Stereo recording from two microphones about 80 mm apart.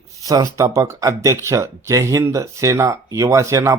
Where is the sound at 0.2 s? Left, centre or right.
Right.